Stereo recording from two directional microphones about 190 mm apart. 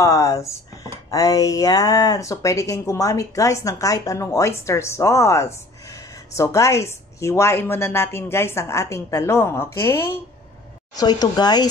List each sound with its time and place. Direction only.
0.0 s speech: 15° left (ahead or behind)